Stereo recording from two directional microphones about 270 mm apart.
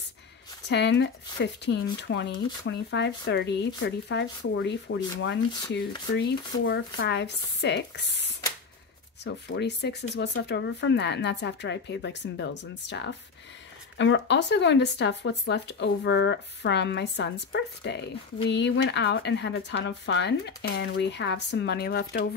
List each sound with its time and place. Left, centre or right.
0.7 s speech: left